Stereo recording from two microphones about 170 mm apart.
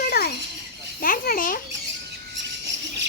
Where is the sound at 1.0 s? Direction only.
55° left (ahead or behind).